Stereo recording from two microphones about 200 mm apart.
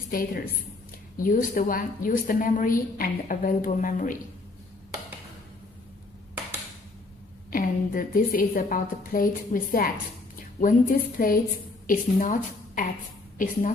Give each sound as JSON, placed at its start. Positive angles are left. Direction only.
{"t": 0.1, "sound": "a woman's voice", "side_deg": 45}
{"t": 7.5, "sound": "a woman's voice", "side_deg": 45}